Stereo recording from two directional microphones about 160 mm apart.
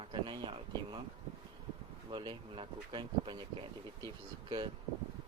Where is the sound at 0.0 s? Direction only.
30° right (ahead or behind).